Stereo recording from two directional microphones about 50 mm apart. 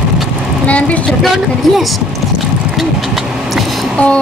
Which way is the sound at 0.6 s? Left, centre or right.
Left.